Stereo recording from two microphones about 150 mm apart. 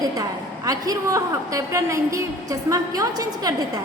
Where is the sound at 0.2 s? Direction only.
25° right (ahead or behind).